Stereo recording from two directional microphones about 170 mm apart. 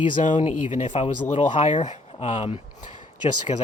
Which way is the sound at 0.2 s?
45° left (ahead or behind).